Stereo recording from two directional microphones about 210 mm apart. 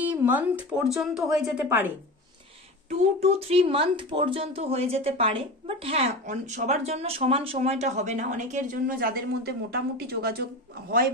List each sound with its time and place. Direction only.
0.0 s speech: 10° right (ahead or behind)
2.9 s speech: 30° right (ahead or behind); by 10.4 s 50° right (ahead or behind)